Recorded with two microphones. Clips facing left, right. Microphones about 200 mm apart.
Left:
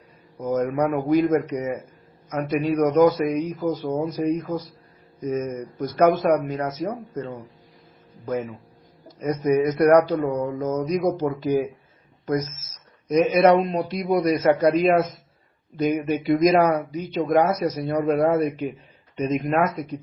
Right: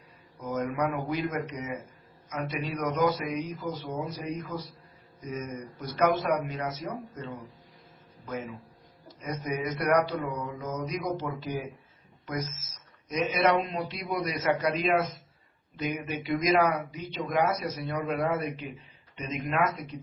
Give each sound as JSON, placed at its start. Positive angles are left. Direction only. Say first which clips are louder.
{"t": 0.3, "sound": "speech", "louder": "left 8 dB", "side_deg": 40}
{"t": 9.0, "sound": "speech", "louder": "left 12 dB", "side_deg": 45}
{"t": 13.1, "sound": "speech", "louder": "left 9 dB", "side_deg": 45}